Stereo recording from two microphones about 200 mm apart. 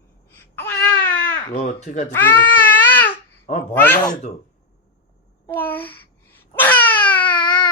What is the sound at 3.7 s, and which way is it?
Speech, 10° left (ahead or behind).